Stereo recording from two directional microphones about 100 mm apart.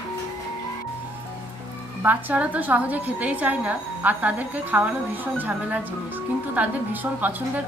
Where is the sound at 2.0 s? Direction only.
15° right (ahead or behind).